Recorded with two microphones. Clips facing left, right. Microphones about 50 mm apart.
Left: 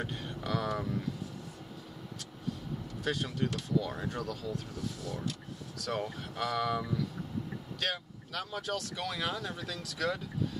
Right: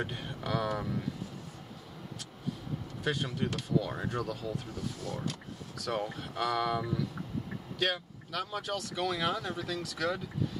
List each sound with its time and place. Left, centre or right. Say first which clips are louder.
0.0 s speech: right 1 dB; centre
3.0 s speech: even; centre
5.0 s speech: right 2 dB; right
5.8 s speech: right 1 dB; centre